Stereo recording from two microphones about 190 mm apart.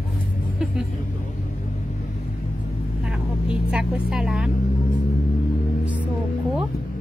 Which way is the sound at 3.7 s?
5° right (ahead or behind).